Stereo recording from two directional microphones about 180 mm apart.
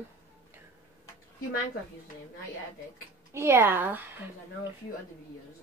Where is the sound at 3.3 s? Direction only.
15° right (ahead or behind).